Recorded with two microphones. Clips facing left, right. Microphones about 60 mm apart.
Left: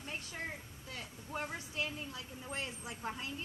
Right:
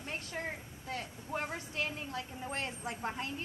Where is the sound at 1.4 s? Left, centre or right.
Right.